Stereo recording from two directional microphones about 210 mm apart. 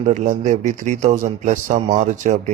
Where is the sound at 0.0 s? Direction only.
35° right (ahead or behind).